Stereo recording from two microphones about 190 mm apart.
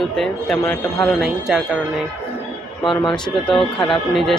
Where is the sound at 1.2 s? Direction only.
5° right (ahead or behind).